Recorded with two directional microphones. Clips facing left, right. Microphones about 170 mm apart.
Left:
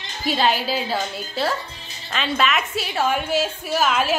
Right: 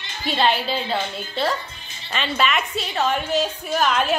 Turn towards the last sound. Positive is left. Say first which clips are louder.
# even
turn(degrees=5)  # may be behind; listen again after turning